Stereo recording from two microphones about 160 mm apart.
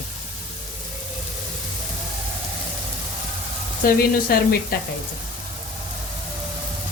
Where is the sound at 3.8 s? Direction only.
65° left (ahead or behind).